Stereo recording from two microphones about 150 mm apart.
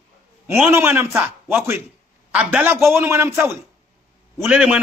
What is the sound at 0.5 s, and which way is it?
A man's voice, 15° right (ahead or behind).